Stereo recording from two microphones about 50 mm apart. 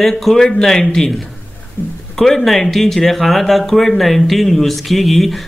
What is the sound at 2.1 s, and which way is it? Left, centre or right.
Speech, centre.